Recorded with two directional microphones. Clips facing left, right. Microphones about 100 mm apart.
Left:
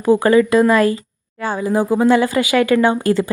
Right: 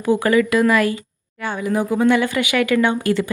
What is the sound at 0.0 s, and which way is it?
Speech, 35° left (ahead or behind).